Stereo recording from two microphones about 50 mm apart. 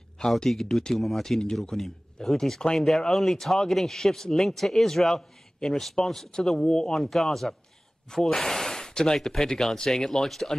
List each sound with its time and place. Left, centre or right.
0.2 s speech: centre